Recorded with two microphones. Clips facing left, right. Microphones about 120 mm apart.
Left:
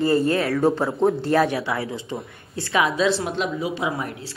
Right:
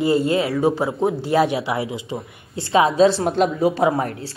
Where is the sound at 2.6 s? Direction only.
30° right (ahead or behind); by 4.3 s 45° right (ahead or behind).